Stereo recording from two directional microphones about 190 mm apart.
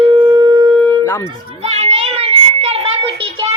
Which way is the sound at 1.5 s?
35° right (ahead or behind).